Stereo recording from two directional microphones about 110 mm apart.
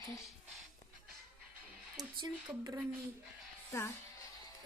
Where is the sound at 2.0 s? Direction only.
35° right (ahead or behind).